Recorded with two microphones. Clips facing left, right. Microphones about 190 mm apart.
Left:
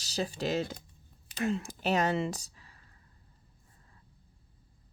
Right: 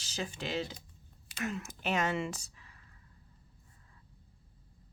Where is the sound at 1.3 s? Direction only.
30° left (ahead or behind).